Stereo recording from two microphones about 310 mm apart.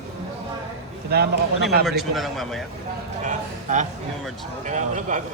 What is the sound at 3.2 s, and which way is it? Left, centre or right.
A man's voice, right.